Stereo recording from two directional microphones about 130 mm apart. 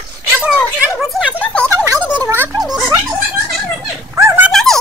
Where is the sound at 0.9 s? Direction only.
Centre (ahead or behind).